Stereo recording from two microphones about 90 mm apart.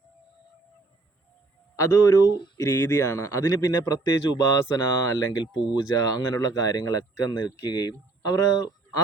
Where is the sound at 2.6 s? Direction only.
30° left (ahead or behind); by 7.9 s 50° left (ahead or behind).